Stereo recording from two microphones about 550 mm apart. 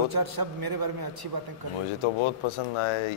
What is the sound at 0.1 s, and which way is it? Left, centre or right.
A man's voice, right.